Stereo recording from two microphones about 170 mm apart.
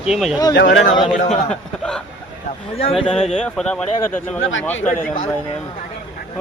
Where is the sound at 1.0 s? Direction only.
40° left (ahead or behind).